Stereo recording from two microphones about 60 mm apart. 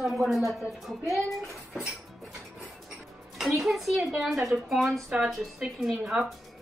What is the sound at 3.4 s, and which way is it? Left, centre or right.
Speech, centre.